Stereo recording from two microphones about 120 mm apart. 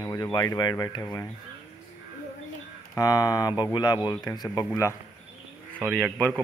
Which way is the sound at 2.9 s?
30° left (ahead or behind).